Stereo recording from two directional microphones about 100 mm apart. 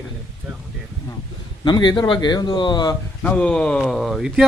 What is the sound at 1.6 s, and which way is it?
Speech, 45° left (ahead or behind).